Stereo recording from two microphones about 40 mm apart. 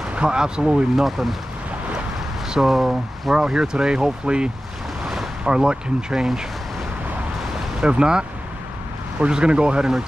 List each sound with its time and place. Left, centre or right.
0.1 s speech: right
1.0 s speech: centre
2.5 s speech: centre
3.3 s speech: centre
5.0 s boat: centre
5.4 s speech: right
7.5 s speech: right
9.3 s speech: right